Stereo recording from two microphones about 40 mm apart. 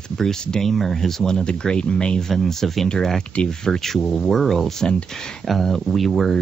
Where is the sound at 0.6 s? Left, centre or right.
Centre.